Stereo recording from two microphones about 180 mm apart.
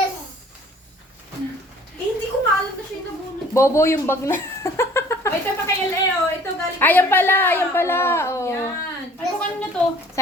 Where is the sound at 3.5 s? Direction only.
15° left (ahead or behind).